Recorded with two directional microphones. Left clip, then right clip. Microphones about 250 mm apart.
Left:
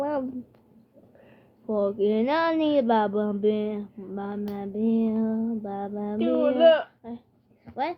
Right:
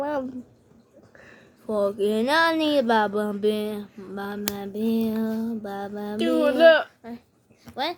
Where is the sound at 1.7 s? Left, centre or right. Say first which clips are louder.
Right 1 dB; centre.